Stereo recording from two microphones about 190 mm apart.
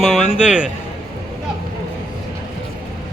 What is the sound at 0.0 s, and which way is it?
Music, centre (ahead or behind).